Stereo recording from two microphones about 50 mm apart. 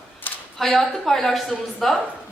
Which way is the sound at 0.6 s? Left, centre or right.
Centre.